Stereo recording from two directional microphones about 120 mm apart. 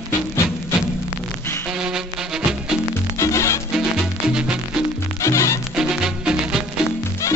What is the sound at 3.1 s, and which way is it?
Music, 25° left (ahead or behind).